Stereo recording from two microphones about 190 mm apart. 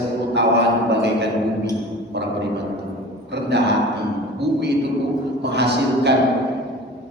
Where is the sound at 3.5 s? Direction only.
65° right (ahead or behind).